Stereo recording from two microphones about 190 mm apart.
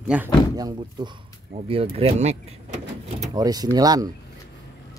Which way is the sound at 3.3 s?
20° right (ahead or behind).